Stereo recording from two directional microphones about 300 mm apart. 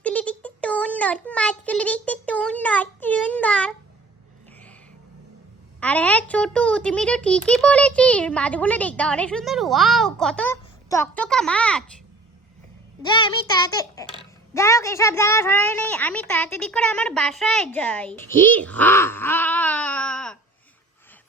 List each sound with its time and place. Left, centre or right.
0.0 s child singing: centre
5.8 s a child's voice: centre
13.0 s a child's voice: centre